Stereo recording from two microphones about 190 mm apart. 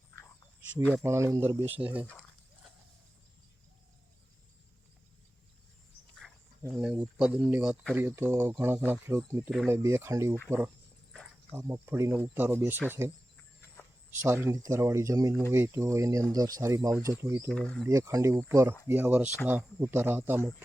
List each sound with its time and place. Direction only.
0.7 s speech: 5° right (ahead or behind)
6.7 s speech: 5° right (ahead or behind)
11.1 s cricket: 5° left (ahead or behind)
11.5 s speech: 15° right (ahead or behind)
14.4 s speech: 15° right (ahead or behind)
17.5 s speech: 5° left (ahead or behind)
17.8 s speech: 15° right (ahead or behind)